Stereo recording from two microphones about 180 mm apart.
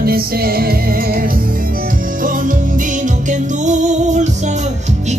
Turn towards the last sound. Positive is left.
turn(degrees=-40)  # may be behind; listen again after turning